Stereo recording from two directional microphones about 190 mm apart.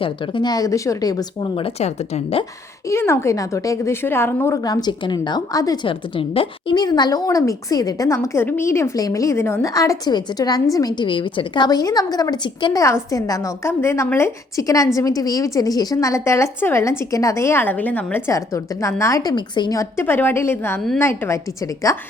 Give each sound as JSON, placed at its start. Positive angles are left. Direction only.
{"t": 0.0, "sound": "a woman's voice", "side_deg": 25}
{"t": 2.9, "sound": "a woman's voice", "side_deg": 15}